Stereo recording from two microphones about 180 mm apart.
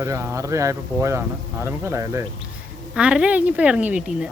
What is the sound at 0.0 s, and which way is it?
Speech, 15° right (ahead or behind).